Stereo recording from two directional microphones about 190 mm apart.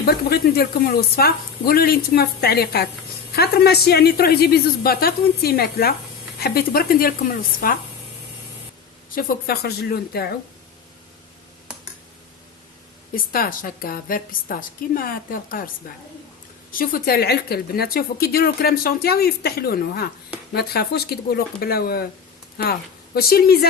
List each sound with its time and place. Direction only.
0.0 s a woman's voice: 55° left (ahead or behind)
9.1 s speech: 50° left (ahead or behind)
13.1 s a woman's voice: 50° left (ahead or behind)
16.7 s a woman's voice: 50° left (ahead or behind)
23.1 s a woman's voice: 55° left (ahead or behind)